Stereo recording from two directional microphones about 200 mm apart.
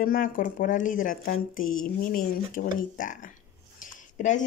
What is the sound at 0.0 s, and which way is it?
Speech, 45° left (ahead or behind).